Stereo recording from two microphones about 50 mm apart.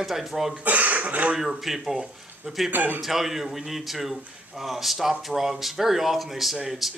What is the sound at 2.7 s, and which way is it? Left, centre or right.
Speech, right.